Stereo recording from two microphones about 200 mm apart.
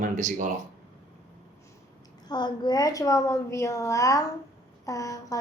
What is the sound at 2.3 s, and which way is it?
A woman's voice, 20° left (ahead or behind).